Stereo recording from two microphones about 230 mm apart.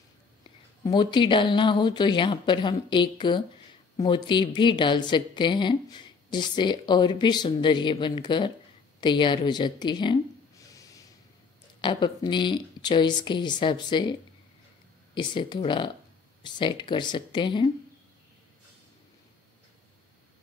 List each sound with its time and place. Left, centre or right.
0.8 s a woman's voice: centre
10.8 s snort: centre
11.8 s a woman's voice: centre
15.1 s a woman's voice: centre